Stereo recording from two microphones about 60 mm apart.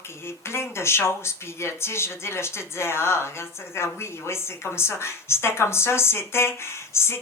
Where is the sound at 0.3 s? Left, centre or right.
Left.